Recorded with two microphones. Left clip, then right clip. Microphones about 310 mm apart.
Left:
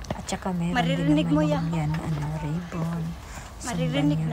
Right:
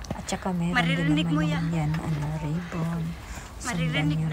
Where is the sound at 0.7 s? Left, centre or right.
Centre.